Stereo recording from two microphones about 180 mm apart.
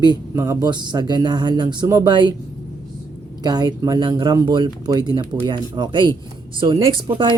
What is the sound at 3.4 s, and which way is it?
Speech, 20° right (ahead or behind).